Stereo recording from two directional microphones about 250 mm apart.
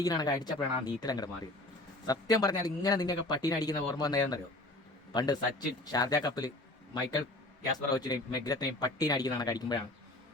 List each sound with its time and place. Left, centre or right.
0.0 s a man's voice: centre